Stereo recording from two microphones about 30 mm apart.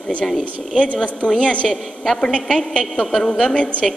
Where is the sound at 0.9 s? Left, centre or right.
Left.